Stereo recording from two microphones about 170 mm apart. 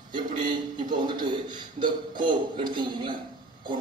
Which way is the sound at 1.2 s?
25° right (ahead or behind).